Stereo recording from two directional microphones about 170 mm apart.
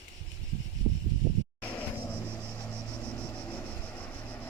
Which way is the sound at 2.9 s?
5° left (ahead or behind).